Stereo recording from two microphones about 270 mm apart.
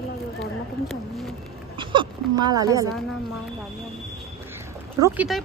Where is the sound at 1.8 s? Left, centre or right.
Centre.